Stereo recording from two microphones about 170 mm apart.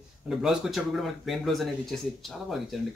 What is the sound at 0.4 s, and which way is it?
Speech, centre (ahead or behind).